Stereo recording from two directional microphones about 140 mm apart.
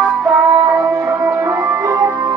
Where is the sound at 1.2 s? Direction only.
20° right (ahead or behind).